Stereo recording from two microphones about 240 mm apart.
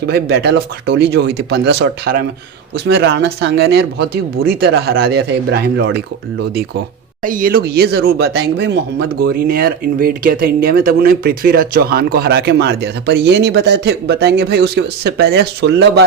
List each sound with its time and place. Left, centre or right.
0.1 s speech: right
7.2 s speech: right